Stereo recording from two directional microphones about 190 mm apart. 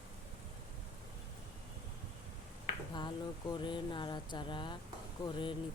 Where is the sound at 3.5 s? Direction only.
25° left (ahead or behind).